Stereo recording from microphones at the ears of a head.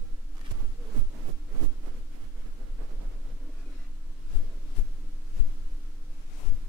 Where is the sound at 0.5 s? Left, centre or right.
Right.